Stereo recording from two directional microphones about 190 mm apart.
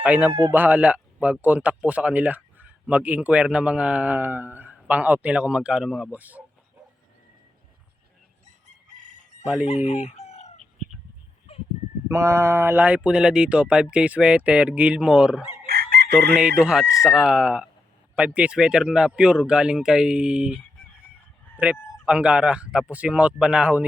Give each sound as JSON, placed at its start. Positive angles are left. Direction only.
{"t": 0.0, "sound": "speech", "side_deg": -5}
{"t": 8.4, "sound": "chicken", "side_deg": -40}
{"t": 9.6, "sound": "chicken", "side_deg": 35}
{"t": 11.5, "sound": "a sound", "side_deg": 30}
{"t": 12.0, "sound": "a man's voice", "side_deg": -15}
{"t": 15.6, "sound": "chicken", "side_deg": -55}
{"t": 16.4, "sound": "a man's voice", "side_deg": -5}
{"t": 21.6, "sound": "a man's voice", "side_deg": -5}